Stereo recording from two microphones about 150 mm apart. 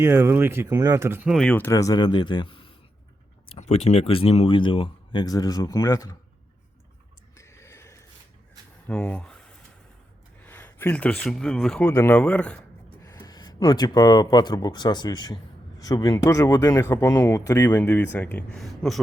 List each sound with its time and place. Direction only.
0.0 s speech: 15° right (ahead or behind)
1.3 s speech: 5° left (ahead or behind); by 6.1 s 25° left (ahead or behind)
7.3 s a sound: 20° left (ahead or behind)
10.4 s speech: 15° left (ahead or behind)
13.0 s speech: 20° left (ahead or behind); by 18.9 s centre (ahead or behind)